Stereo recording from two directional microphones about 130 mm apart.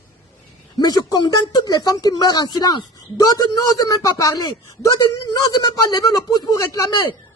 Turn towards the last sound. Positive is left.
turn(degrees=30)  # may be behind; listen again after turning